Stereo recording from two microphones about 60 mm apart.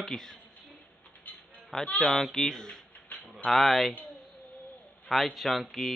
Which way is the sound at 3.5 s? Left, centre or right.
Centre.